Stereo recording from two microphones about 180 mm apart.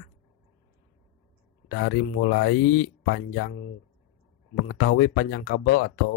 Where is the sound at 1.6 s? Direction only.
90° left.